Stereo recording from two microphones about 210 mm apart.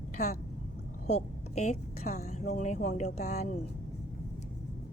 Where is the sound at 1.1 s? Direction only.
30° left (ahead or behind).